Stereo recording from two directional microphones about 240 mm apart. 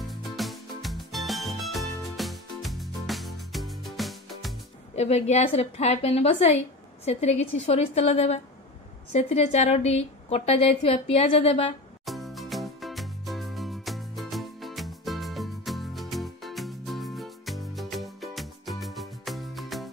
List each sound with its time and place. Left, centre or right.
0.1 s music: centre
4.9 s a woman's voice: left
12.1 s music: centre